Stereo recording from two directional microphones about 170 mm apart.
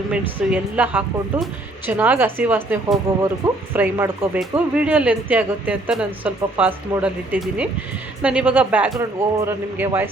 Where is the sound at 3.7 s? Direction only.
10° right (ahead or behind).